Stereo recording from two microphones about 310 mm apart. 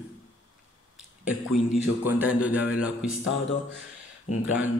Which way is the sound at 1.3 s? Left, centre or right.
Left.